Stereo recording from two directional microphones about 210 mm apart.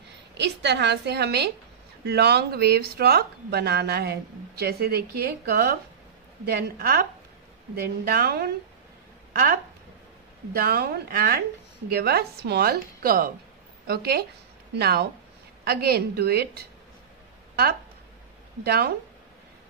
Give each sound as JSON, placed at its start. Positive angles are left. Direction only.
{"t": 0.3, "sound": "speech", "side_deg": -55}
{"t": 10.5, "sound": "speech", "side_deg": -45}
{"t": 18.6, "sound": "speech", "side_deg": -50}